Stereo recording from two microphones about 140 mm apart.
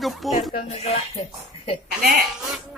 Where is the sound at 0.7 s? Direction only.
50° left (ahead or behind).